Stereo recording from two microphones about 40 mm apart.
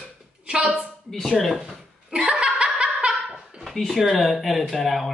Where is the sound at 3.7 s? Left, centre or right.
Centre.